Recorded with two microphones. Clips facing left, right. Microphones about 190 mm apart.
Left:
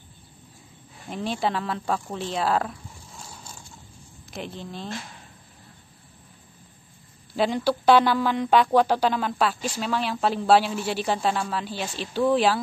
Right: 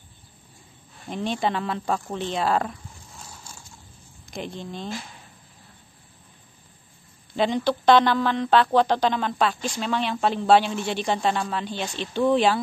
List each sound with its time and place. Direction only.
1.1 s speech: 5° left (ahead or behind)
4.3 s speech: centre (ahead or behind)
7.3 s speech: 5° left (ahead or behind)